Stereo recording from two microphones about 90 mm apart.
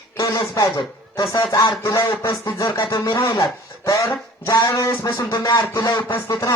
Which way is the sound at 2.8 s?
55° left (ahead or behind).